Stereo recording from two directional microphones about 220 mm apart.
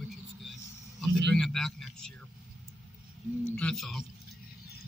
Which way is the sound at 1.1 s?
Centre (ahead or behind).